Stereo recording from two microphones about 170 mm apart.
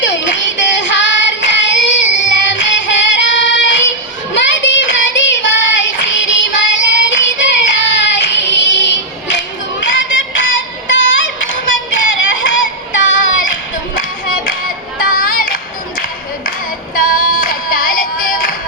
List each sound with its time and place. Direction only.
0.0 s child singing: 90° left
2.1 s music: 90° left
4.5 s child singing: 90° left
9.9 s music: 90° left
13.4 s music: 50° left (ahead or behind)
14.9 s a sound: 55° left (ahead or behind)
16.9 s music: 55° left (ahead or behind)